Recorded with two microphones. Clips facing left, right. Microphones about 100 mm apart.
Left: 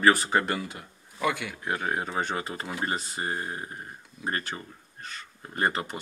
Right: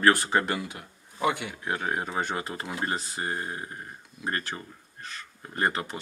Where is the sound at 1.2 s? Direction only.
25° right (ahead or behind).